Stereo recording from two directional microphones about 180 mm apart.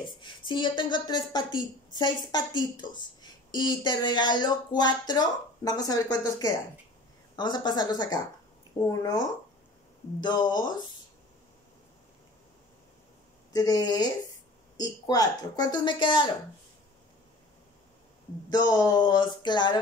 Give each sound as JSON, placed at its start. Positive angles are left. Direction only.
{"t": 0.2, "sound": "a woman's voice", "side_deg": 25}
{"t": 13.5, "sound": "a woman's voice", "side_deg": 20}
{"t": 18.7, "sound": "a woman's voice", "side_deg": 20}